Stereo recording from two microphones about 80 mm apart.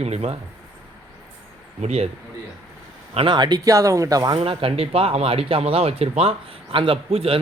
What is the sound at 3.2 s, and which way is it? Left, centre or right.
Speech, right.